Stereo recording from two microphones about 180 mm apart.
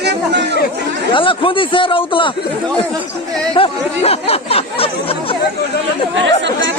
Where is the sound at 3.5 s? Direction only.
30° left (ahead or behind).